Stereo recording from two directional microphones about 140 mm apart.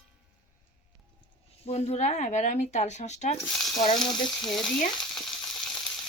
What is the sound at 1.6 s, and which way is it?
Speech, 50° left (ahead or behind).